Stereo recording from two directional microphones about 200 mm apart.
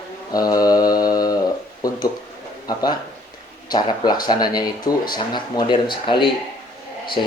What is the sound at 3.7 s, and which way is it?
Speech, 20° left (ahead or behind).